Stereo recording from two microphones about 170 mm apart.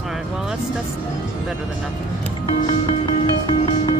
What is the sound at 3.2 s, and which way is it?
Music, 25° left (ahead or behind).